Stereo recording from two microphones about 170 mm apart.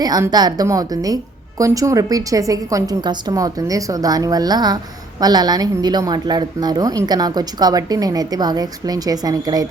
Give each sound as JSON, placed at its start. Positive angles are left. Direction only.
{"t": 0.0, "sound": "a woman's voice", "side_deg": -25}